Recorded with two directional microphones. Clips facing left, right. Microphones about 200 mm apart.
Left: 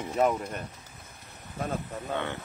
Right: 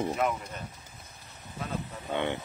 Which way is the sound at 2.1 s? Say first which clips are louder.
Right 4 dB; 20° right (ahead or behind).